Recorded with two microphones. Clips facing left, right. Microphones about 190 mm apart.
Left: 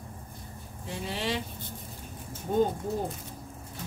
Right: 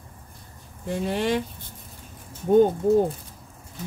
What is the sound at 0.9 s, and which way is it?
Speech, 55° right (ahead or behind).